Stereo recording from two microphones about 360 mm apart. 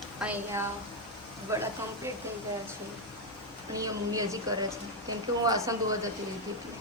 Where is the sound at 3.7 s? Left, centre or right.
Centre.